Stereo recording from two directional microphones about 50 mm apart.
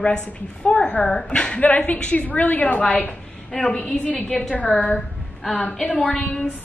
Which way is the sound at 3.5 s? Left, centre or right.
Centre.